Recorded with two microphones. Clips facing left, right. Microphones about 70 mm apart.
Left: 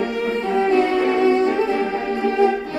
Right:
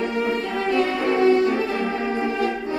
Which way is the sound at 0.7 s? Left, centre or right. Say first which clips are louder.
Right 1 dB; left.